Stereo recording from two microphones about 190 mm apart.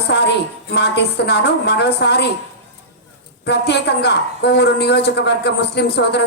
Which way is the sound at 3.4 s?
60° left (ahead or behind).